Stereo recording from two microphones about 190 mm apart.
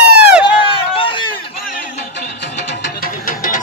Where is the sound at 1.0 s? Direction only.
25° left (ahead or behind).